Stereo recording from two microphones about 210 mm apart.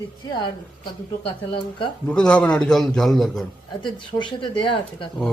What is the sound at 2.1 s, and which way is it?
A man's voice, 5° left (ahead or behind).